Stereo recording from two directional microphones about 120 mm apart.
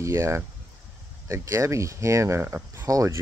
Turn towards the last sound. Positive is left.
turn(degrees=-25)  # may be behind; listen again after turning